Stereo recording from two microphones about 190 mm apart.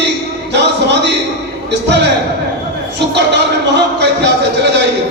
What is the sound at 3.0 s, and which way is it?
A man's voice, 65° right (ahead or behind).